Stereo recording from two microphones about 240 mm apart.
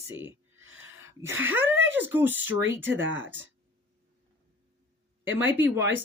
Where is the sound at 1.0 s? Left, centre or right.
Centre.